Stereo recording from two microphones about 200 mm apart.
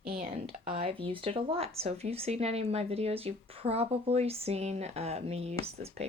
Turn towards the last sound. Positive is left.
turn(degrees=-30)  # may be behind; listen again after turning